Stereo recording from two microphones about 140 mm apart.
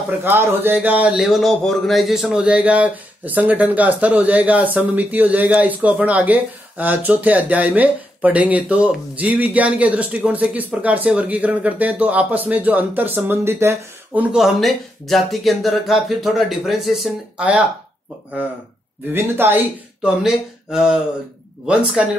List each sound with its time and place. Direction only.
0.2 s speech: 15° right (ahead or behind)
14.3 s speech: centre (ahead or behind)
19.1 s speech: 15° right (ahead or behind)
20.2 s speech: 5° right (ahead or behind)